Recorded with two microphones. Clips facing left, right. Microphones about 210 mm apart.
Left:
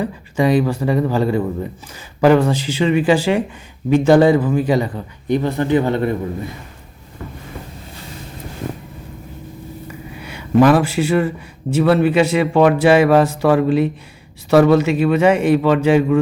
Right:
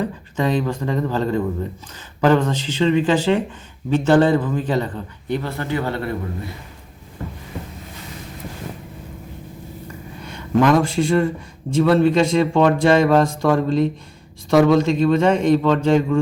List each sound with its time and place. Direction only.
0.0 s a man's voice: 10° left (ahead or behind)
10.2 s a man's voice: 10° left (ahead or behind)